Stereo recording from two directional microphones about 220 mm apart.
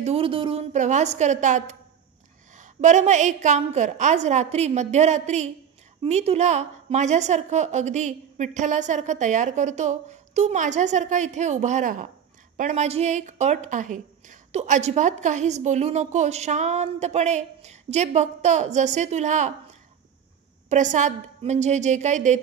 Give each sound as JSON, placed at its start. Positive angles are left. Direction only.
{"t": 0.0, "sound": "a woman's voice", "side_deg": -25}
{"t": 20.7, "sound": "a woman's voice", "side_deg": -35}